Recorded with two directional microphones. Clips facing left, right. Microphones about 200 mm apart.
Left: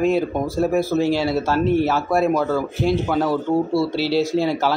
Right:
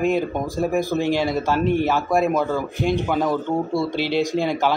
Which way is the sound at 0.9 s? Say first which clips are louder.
Left 2 dB; 5° right (ahead or behind).